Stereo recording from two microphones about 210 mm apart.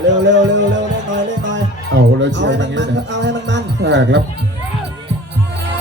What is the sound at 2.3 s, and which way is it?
Speech, 60° right (ahead or behind).